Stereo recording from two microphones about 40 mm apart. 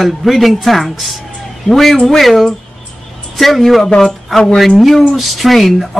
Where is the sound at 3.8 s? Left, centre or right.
Centre.